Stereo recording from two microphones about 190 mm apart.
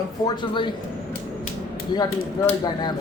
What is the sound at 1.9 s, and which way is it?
Speech, 20° left (ahead or behind).